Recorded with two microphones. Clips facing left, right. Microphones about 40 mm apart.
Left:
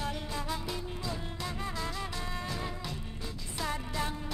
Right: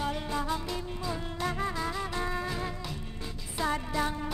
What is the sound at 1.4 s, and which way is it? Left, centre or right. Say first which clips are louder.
Music: right 6 dB; right.